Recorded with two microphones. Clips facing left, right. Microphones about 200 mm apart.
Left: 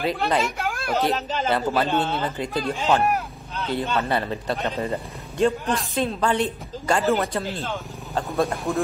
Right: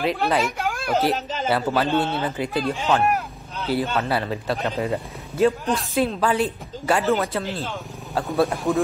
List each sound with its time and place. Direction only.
0.0 s speech: centre (ahead or behind)
1.9 s a man's voice: 55° right (ahead or behind)
2.1 s speech: 10° right (ahead or behind)